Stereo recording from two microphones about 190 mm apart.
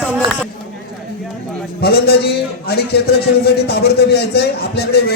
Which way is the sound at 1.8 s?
55° left (ahead or behind).